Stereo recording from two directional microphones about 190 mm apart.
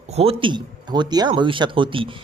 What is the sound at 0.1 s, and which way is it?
Speech, 30° right (ahead or behind).